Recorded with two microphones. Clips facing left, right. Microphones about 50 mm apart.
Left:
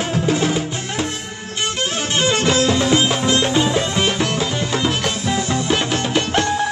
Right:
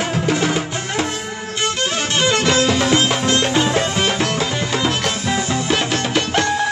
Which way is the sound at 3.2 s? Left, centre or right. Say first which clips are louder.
Even; centre.